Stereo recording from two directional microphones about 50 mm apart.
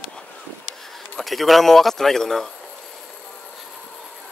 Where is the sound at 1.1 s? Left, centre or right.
Centre.